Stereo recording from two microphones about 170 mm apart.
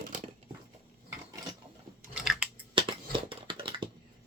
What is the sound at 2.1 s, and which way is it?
Chewing, 5° right (ahead or behind).